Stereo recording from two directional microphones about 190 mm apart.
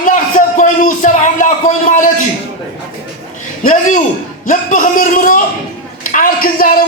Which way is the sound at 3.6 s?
40° left (ahead or behind).